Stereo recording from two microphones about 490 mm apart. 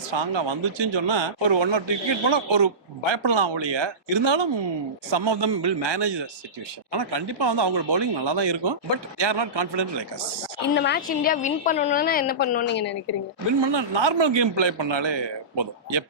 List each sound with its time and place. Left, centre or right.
0.1 s a man's voice: right
10.8 s a woman's voice: centre
13.6 s a man's voice: right